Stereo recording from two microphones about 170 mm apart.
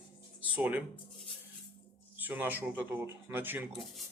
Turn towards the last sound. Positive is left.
turn(degrees=-10)  # may be behind; listen again after turning